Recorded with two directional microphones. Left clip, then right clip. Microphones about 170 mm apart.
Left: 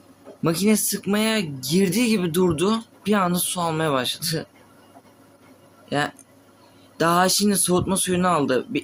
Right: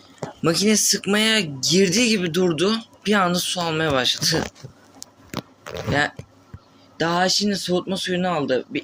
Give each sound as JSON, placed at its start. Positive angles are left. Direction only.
{"t": 0.4, "sound": "speech", "side_deg": 25}
{"t": 5.9, "sound": "speech", "side_deg": 20}